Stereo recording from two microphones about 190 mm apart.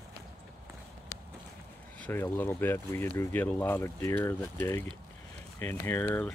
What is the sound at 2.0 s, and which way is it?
Speech, 10° left (ahead or behind).